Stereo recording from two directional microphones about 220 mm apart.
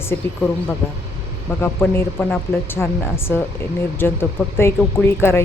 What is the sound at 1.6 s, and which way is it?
Speech, 10° left (ahead or behind).